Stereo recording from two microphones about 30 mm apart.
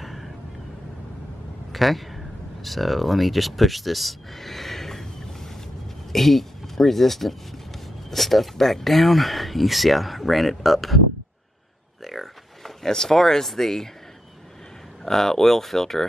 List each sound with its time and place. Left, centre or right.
0.0 s vehicle: centre
1.7 s speech: centre
12.0 s a sound: centre
12.8 s speech: centre
15.0 s speech: centre